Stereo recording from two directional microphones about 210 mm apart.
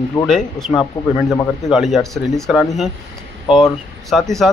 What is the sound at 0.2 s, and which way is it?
Speech, 20° left (ahead or behind).